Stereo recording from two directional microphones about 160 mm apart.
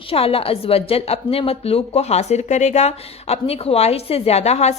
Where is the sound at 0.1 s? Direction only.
35° left (ahead or behind).